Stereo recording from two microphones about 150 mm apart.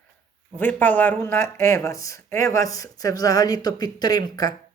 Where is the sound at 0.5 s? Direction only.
10° left (ahead or behind).